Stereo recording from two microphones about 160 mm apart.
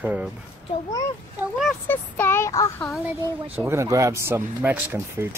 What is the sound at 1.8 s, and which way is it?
Speech, 10° left (ahead or behind).